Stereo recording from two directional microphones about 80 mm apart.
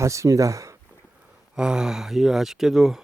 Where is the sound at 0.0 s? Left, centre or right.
Right.